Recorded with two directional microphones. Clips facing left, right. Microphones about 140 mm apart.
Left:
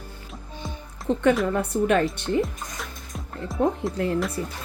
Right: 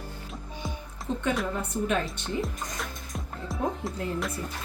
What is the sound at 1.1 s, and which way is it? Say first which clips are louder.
Speech: left 8 dB; 70° left (ahead or behind).